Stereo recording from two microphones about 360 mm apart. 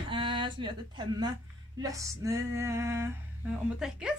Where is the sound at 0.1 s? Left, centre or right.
Centre.